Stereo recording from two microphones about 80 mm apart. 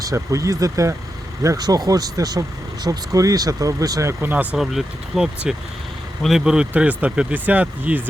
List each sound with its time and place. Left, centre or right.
0.0 s speech: right
4.2 s speech: right
4.5 s speech: centre